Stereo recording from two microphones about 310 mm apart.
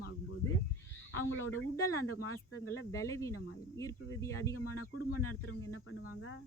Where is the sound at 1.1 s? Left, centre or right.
Left.